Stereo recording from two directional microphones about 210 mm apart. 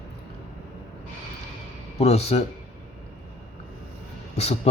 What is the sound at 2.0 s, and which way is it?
Speech, 30° left (ahead or behind).